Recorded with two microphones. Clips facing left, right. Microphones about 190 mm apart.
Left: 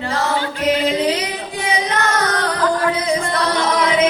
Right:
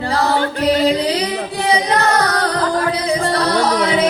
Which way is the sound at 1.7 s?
35° right (ahead or behind).